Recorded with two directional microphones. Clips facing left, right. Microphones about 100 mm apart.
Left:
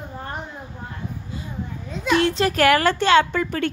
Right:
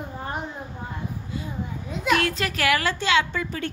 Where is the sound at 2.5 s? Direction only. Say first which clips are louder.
Left 7 dB; 45° left (ahead or behind).